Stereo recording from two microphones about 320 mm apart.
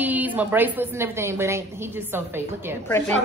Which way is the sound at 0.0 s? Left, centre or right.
Centre.